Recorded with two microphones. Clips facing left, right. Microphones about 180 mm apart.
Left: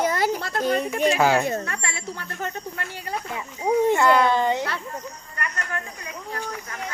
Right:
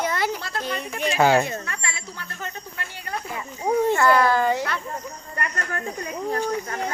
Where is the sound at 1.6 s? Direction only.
50° left (ahead or behind).